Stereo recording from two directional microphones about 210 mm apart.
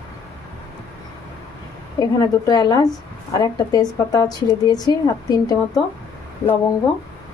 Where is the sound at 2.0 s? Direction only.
20° left (ahead or behind).